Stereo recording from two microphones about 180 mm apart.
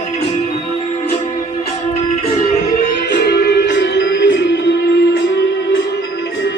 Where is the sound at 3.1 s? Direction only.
70° left (ahead or behind); by 4.4 s 90° left.